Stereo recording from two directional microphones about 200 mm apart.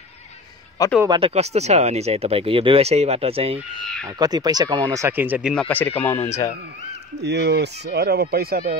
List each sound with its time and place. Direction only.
1.0 s speech: 25° right (ahead or behind); by 5.5 s 10° right (ahead or behind)
5.5 s speech: 5° left (ahead or behind)
7.2 s speech: 55° right (ahead or behind)